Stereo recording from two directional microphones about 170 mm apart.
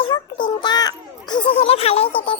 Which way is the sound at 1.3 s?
30° left (ahead or behind).